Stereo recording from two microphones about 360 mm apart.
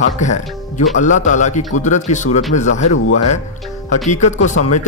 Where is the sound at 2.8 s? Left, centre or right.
Left.